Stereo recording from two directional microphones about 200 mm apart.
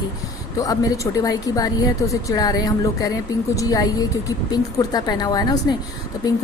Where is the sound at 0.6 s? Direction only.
15° left (ahead or behind).